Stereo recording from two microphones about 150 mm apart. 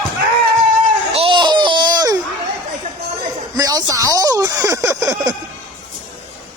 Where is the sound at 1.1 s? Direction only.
35° right (ahead or behind).